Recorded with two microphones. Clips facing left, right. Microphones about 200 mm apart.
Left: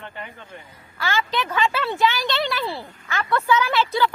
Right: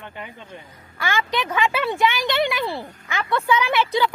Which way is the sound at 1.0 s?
15° right (ahead or behind).